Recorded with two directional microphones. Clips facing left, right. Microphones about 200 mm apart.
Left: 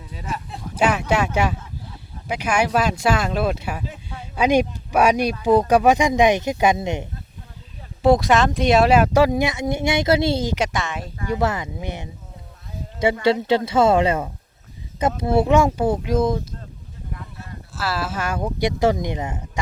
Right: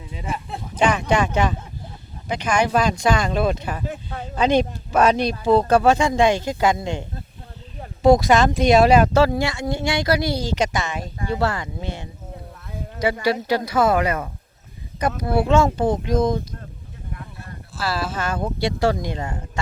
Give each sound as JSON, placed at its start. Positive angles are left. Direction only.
{"t": 0.8, "sound": "speech", "side_deg": 5}
{"t": 3.8, "sound": "a sound", "side_deg": -50}
{"t": 4.4, "sound": "speech", "side_deg": 10}
{"t": 8.0, "sound": "speech", "side_deg": 0}
{"t": 10.5, "sound": "speech", "side_deg": 0}
{"t": 11.3, "sound": "speech", "side_deg": 20}
{"t": 13.2, "sound": "speech", "side_deg": 25}
{"t": 17.7, "sound": "speech", "side_deg": 5}